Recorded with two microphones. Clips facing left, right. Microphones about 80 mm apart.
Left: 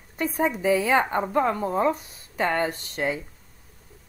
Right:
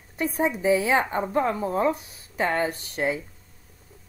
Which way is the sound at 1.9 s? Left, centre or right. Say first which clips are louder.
Even; left.